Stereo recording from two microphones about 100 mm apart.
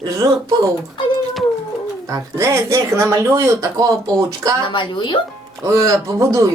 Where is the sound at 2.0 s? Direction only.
30° right (ahead or behind).